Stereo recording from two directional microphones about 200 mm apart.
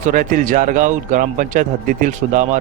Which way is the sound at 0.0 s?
40° right (ahead or behind).